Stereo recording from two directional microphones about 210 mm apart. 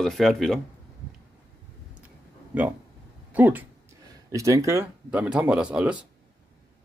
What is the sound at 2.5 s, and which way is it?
Speech, 5° right (ahead or behind).